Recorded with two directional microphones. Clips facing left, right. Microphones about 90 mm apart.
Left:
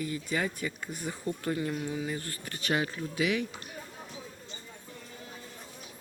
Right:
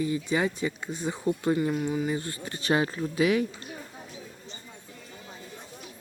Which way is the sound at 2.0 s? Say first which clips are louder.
Right 6 dB; 20° right (ahead or behind).